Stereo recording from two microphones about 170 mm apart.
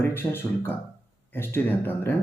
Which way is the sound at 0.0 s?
15° left (ahead or behind).